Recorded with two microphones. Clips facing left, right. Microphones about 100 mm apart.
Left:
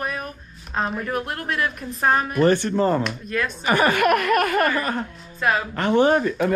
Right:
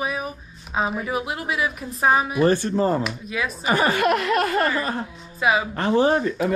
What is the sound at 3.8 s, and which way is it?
Speech, 55° left (ahead or behind).